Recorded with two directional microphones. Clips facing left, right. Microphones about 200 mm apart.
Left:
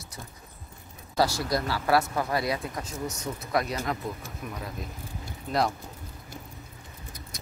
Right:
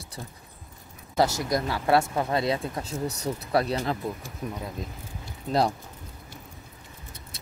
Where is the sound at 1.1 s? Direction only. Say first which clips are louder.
Right 2 dB; 20° right (ahead or behind).